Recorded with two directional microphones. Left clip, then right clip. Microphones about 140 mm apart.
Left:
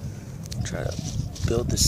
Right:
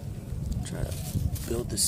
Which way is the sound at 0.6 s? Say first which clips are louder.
Left 7 dB; 30° left (ahead or behind).